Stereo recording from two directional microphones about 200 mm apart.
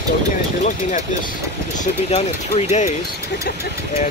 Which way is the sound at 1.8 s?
35° left (ahead or behind).